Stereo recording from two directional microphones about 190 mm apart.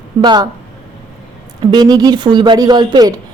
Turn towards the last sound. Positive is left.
turn(degrees=-20)  # may be behind; listen again after turning